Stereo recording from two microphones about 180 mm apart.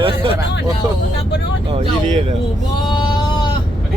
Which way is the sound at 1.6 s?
35° right (ahead or behind).